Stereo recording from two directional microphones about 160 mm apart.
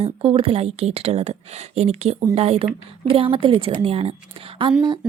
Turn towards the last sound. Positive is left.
turn(degrees=-30)  # may be behind; listen again after turning